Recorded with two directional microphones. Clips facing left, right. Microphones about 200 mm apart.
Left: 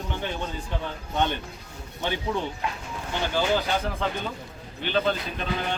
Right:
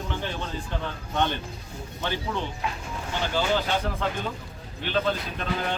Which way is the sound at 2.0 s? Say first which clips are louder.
Left 1 dB; 15° left (ahead or behind).